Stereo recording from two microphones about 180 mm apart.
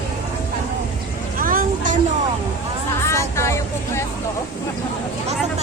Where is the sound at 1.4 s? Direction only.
50° right (ahead or behind).